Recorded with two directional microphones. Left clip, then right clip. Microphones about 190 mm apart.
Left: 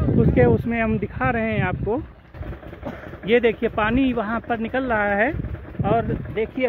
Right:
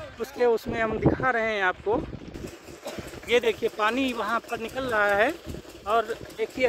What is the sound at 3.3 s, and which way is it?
Speech, 20° right (ahead or behind).